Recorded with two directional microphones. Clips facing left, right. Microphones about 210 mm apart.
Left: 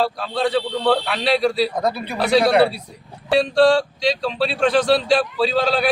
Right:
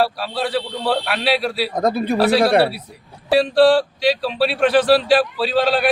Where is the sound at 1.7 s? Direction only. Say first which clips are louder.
Right 4 dB; 45° right (ahead or behind).